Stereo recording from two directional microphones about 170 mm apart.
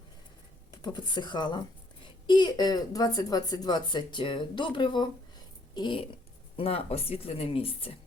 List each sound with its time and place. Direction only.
0.7 s speech: 25° left (ahead or behind)